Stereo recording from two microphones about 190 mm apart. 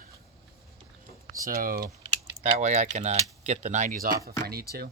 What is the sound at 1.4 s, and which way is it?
Speech, 50° right (ahead or behind).